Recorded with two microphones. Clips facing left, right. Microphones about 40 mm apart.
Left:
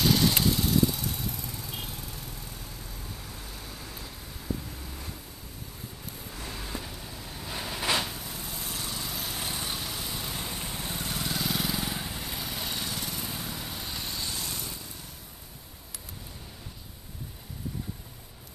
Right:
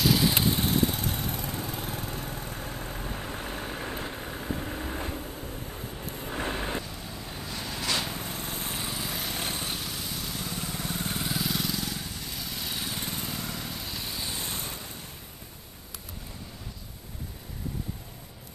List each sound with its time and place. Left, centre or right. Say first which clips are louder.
0.0 s vehicle: even; centre
0.3 s vehicle: even; centre
0.6 s vehicle: even; right
7.4 s a sound: left 2 dB; centre
8.1 s vehicle: right 4 dB; right
8.9 s vehicle: right 2 dB; centre
9.7 s vehicle: even; centre
10.1 s vehicle: even; centre
10.4 s vehicle: right 2 dB; left
11.2 s vehicle: left 1 dB; centre
11.6 s vehicle: left 1 dB; left
12.6 s lawn mower: right 2 dB; centre
13.4 s vehicle: right 1 dB; centre
14.3 s vehicle: right 1 dB; right